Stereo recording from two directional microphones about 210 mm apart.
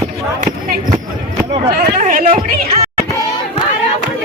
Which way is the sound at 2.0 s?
40° right (ahead or behind).